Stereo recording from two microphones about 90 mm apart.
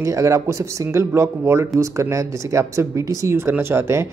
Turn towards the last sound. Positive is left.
turn(degrees=-30)  # may be behind; listen again after turning